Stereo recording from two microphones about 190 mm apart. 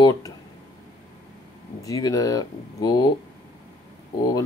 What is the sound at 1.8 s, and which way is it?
Speech, 20° left (ahead or behind).